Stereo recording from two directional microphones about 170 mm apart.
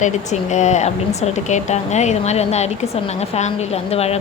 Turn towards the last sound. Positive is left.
turn(degrees=35)  # may be behind; listen again after turning